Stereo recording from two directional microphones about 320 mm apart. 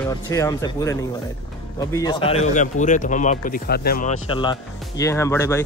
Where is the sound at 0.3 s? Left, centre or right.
Centre.